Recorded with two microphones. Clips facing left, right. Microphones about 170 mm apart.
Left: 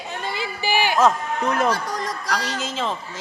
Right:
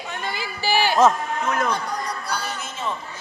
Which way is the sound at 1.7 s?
90° left.